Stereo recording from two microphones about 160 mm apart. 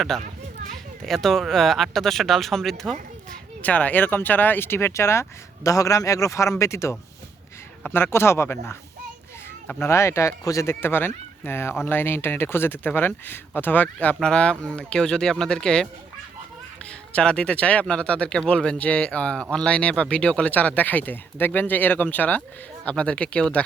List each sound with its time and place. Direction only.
0.1 s speech: 5° left (ahead or behind)
17.1 s speech: 5° left (ahead or behind)